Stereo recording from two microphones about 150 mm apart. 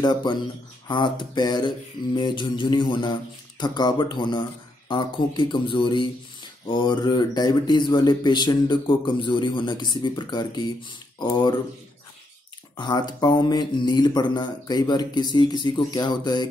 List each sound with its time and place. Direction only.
0.0 s speech: 30° left (ahead or behind)
12.7 s speech: 30° left (ahead or behind)